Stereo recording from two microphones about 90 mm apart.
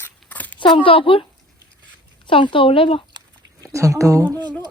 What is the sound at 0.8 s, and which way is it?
Speech, 80° left.